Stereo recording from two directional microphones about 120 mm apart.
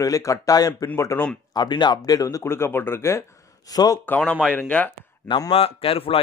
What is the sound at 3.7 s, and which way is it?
Speech, 35° left (ahead or behind).